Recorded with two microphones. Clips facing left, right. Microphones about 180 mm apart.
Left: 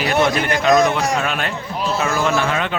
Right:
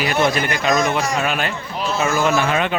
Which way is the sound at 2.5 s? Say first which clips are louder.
Right 2 dB; 15° right (ahead or behind).